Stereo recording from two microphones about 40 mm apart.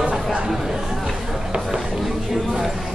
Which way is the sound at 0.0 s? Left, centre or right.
Right.